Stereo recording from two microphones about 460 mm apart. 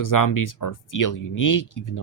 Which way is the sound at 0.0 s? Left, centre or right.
Left.